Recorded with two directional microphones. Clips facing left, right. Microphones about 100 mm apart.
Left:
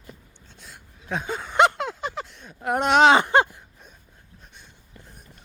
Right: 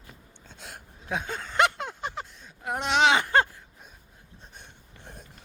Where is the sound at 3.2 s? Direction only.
20° left (ahead or behind).